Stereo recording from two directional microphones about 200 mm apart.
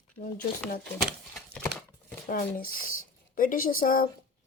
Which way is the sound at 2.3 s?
45° left (ahead or behind).